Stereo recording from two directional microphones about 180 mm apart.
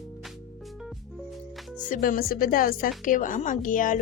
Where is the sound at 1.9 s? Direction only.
50° left (ahead or behind).